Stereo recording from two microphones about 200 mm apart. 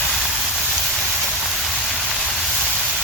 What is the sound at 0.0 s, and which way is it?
Vehicle, centre (ahead or behind).